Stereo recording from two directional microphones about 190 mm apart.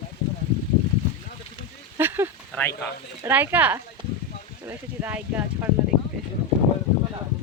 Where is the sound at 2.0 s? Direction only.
10° right (ahead or behind).